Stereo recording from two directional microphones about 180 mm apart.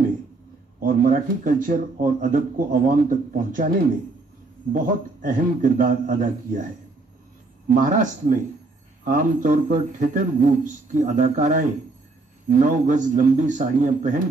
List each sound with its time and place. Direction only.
0.7 s speech: 50° right (ahead or behind)
4.7 s speech: 50° right (ahead or behind)